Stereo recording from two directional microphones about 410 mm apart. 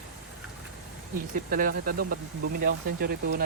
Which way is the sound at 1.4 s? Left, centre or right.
Right.